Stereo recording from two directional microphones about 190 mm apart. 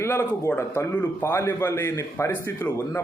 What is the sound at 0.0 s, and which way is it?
A man's voice, 15° left (ahead or behind).